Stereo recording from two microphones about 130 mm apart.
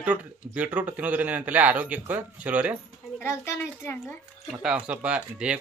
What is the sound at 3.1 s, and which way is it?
A woman's voice, 20° left (ahead or behind).